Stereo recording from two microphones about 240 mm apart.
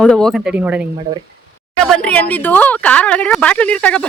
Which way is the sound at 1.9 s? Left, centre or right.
Centre.